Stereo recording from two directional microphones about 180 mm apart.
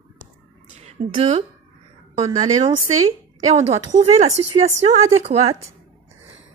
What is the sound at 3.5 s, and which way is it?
A woman's voice, 35° right (ahead or behind).